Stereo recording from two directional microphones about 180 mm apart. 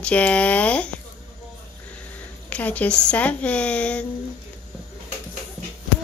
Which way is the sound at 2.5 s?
10° left (ahead or behind).